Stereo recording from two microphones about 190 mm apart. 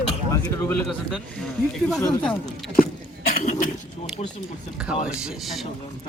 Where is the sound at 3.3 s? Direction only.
40° left (ahead or behind).